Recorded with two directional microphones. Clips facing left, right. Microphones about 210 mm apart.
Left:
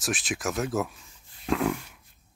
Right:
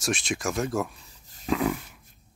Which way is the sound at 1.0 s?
40° right (ahead or behind).